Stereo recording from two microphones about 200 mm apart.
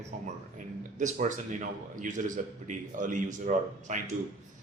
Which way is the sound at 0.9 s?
35° right (ahead or behind).